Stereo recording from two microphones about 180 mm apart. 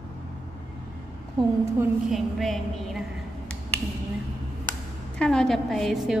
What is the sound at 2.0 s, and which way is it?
Speech, centre (ahead or behind).